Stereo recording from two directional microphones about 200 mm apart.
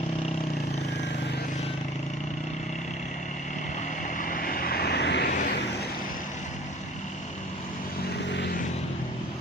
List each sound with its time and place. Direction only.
4.2 s vehicle: 45° left (ahead or behind)
5.3 s vehicle: 40° left (ahead or behind)